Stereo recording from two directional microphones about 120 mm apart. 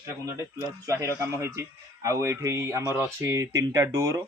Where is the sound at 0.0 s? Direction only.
20° right (ahead or behind).